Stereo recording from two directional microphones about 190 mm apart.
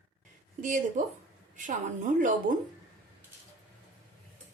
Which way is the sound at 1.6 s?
45° right (ahead or behind).